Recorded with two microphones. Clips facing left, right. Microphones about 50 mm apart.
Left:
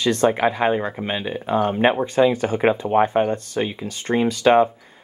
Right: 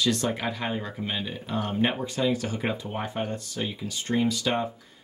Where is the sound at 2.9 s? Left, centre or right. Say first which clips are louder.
Left 15 dB; left.